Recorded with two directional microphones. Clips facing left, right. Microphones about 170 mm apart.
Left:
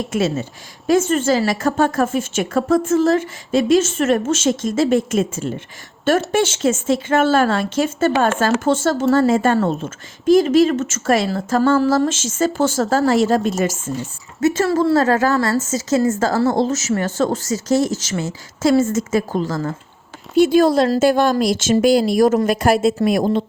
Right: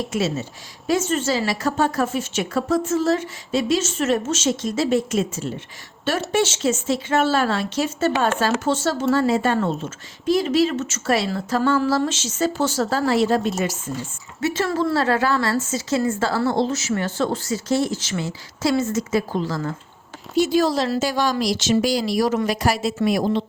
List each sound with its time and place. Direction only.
0.1 s speech: 50° left (ahead or behind)